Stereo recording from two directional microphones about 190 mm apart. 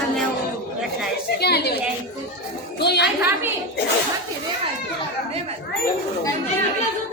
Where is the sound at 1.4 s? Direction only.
60° left (ahead or behind).